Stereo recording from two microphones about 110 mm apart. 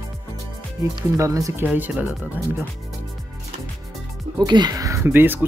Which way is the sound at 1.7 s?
10° right (ahead or behind).